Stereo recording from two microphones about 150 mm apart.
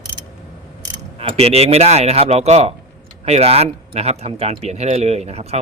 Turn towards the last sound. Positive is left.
turn(degrees=-45)  # may be behind; listen again after turning